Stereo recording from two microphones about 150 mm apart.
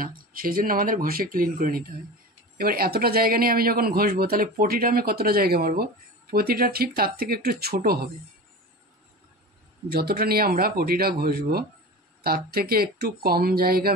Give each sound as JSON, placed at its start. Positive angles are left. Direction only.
{"t": 0.0, "sound": "speech", "side_deg": -70}
{"t": 9.8, "sound": "speech", "side_deg": -90}